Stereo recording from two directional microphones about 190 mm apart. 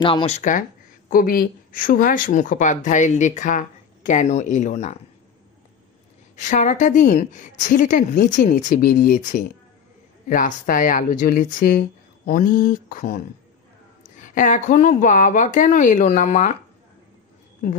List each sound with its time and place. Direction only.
0.0 s speech: 25° left (ahead or behind)
6.3 s speech: 40° left (ahead or behind)